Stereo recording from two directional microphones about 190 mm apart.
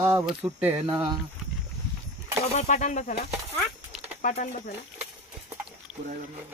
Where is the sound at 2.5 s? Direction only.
40° left (ahead or behind).